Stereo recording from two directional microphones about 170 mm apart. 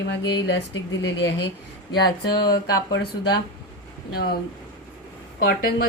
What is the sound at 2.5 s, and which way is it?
Speech, 70° left (ahead or behind).